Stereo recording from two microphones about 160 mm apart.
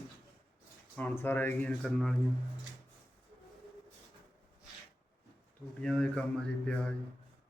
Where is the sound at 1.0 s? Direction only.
10° left (ahead or behind).